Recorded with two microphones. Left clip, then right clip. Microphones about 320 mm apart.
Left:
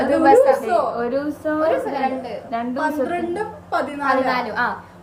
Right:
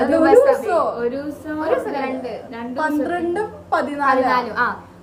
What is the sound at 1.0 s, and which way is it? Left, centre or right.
Speech, centre.